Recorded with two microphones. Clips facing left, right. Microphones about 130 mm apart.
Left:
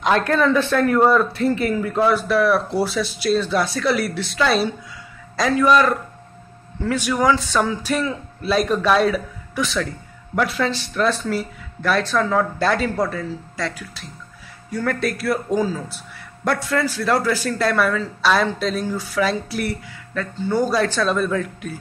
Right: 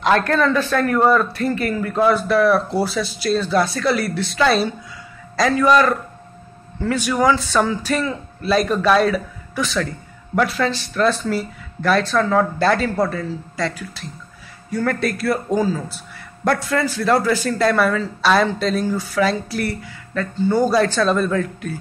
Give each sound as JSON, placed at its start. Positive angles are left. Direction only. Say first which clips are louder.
{"t": 0.3, "sound": "speech", "louder": "even", "side_deg": 15}
{"t": 2.0, "sound": "a man's voice", "louder": "right 2 dB", "side_deg": 5}
{"t": 5.3, "sound": "speech", "louder": "right 1 dB", "side_deg": 5}
{"t": 7.1, "sound": "a man's voice", "louder": "right 1 dB", "side_deg": -5}